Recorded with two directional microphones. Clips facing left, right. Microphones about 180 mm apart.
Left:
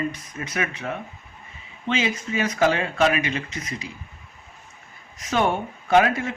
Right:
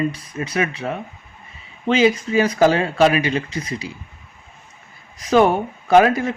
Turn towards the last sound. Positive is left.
turn(degrees=-35)  # may be behind; listen again after turning